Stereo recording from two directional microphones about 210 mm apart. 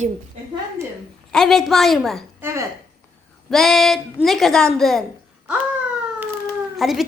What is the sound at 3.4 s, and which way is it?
A woman's voice, centre (ahead or behind).